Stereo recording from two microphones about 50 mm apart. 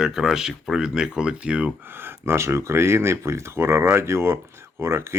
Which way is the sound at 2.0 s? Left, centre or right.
Right.